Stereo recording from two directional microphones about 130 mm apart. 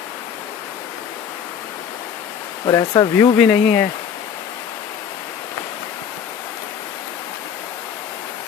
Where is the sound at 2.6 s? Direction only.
35° left (ahead or behind).